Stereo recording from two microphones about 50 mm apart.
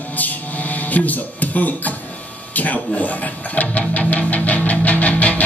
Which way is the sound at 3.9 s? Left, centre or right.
Left.